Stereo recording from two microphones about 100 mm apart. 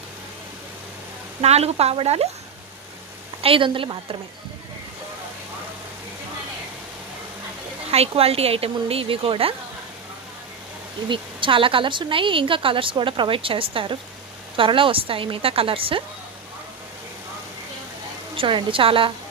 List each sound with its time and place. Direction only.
1.4 s speech: 90° right
3.4 s speech: 65° right (ahead or behind)
7.9 s a woman's voice: 90° right; by 9.6 s 65° right (ahead or behind)
11.1 s speech: 55° right (ahead or behind)
18.3 s speech: 60° right (ahead or behind)